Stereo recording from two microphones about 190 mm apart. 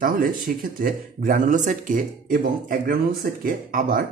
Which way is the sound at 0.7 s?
45° right (ahead or behind).